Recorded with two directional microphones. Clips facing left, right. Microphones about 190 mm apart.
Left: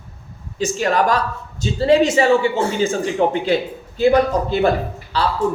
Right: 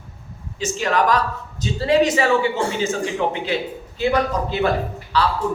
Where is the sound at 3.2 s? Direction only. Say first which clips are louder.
Left 5 dB; 40° left (ahead or behind).